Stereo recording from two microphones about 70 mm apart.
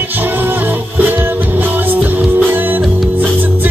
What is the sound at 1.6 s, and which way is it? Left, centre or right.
Music, right.